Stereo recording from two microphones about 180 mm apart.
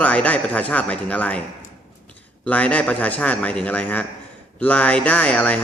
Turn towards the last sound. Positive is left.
turn(degrees=5)  # may be behind; listen again after turning